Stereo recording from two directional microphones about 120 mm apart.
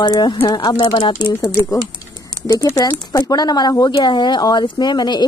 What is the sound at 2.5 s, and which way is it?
Speech, 25° left (ahead or behind).